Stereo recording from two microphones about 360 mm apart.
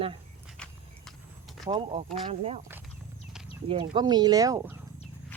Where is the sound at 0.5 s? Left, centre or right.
Centre.